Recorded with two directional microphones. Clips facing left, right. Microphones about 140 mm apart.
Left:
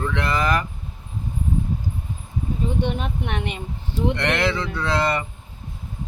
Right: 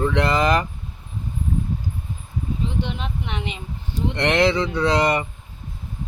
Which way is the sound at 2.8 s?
50° left (ahead or behind).